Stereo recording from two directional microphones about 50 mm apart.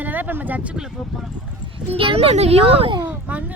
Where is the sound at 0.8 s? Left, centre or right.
Centre.